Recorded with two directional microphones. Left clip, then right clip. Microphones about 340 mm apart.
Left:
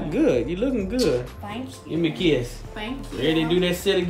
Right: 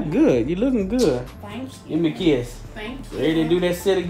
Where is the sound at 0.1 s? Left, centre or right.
Right.